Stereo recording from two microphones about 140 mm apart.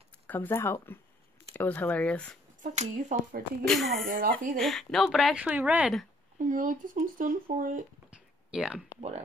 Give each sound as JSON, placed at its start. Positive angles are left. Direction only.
{"t": 0.3, "sound": "speech", "side_deg": 15}
{"t": 2.6, "sound": "speech", "side_deg": -60}
{"t": 3.6, "sound": "a woman's voice", "side_deg": 0}
{"t": 4.1, "sound": "speech", "side_deg": -80}
{"t": 4.6, "sound": "a woman's voice", "side_deg": 0}
{"t": 6.3, "sound": "speech", "side_deg": -70}
{"t": 8.5, "sound": "speech", "side_deg": -5}